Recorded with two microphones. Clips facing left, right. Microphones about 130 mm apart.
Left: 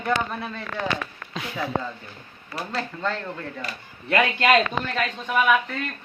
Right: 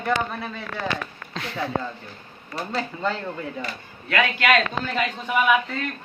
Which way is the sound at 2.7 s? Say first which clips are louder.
Right 2 dB; 5° right (ahead or behind).